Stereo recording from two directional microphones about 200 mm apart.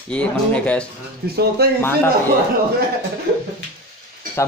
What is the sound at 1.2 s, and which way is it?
Speech, 50° right (ahead or behind).